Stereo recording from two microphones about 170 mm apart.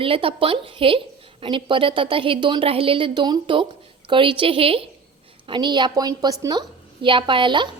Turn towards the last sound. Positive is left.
turn(degrees=-30)  # may be behind; listen again after turning